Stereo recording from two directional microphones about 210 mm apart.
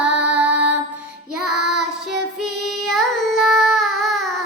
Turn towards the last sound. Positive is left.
turn(degrees=0)  # may be behind; listen again after turning